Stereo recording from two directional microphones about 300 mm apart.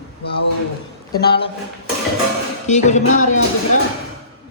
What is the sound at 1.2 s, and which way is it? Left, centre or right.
Speech, left.